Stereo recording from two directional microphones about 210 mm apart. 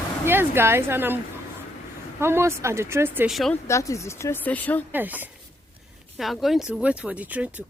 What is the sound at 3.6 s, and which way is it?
Speech, 15° left (ahead or behind).